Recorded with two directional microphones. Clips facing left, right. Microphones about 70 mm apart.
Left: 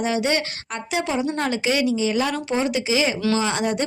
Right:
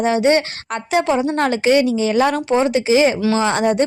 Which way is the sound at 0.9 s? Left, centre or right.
Right.